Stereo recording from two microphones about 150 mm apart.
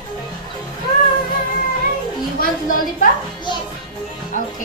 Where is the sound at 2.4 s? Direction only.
65° left (ahead or behind).